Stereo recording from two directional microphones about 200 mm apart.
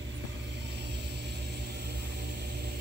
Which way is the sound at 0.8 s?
55° right (ahead or behind).